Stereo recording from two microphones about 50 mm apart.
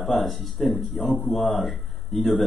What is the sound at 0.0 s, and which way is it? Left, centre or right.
A man's voice, centre.